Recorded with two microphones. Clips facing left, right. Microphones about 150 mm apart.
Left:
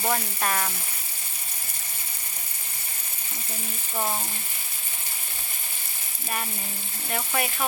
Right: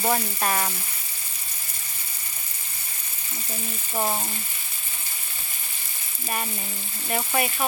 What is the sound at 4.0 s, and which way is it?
Speech, 15° right (ahead or behind).